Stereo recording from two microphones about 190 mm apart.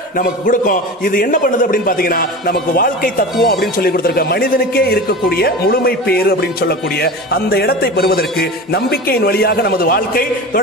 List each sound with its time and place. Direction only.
0.2 s a man's voice: 45° left (ahead or behind)